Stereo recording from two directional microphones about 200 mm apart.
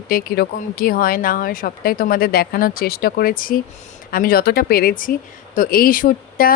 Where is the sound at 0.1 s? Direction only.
45° left (ahead or behind).